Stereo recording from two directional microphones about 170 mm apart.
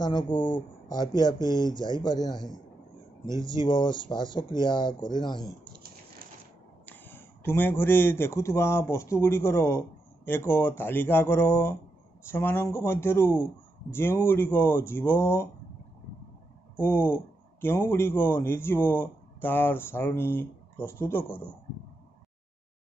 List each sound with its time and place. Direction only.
0.0 s speech: 25° left (ahead or behind)
3.4 s speech: 25° left (ahead or behind)
6.9 s speech: 10° left (ahead or behind)
16.7 s a man's voice: 15° left (ahead or behind)